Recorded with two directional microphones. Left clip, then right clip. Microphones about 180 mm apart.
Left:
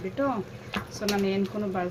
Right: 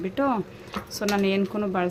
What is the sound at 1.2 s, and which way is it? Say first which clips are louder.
Speech: right 4 dB; 45° right (ahead or behind).